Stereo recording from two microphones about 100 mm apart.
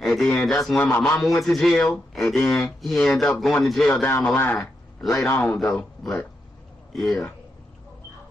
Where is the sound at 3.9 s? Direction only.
20° left (ahead or behind).